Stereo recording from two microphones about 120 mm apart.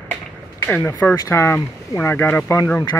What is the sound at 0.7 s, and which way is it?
Speech, 15° left (ahead or behind).